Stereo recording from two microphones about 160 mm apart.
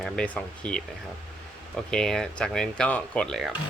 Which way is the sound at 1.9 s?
5° left (ahead or behind).